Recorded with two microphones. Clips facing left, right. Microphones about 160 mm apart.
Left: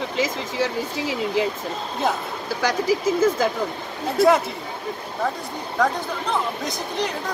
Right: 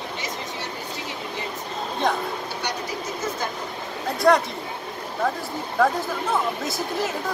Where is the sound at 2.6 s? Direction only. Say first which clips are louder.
Left 13 dB; 90° left.